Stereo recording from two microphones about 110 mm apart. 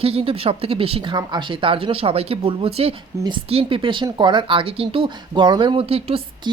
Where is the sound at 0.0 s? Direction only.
60° right (ahead or behind).